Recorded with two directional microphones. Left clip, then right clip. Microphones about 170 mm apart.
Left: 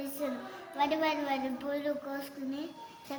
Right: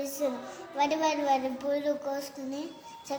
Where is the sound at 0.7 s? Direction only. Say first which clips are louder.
Right 3 dB; 35° right (ahead or behind).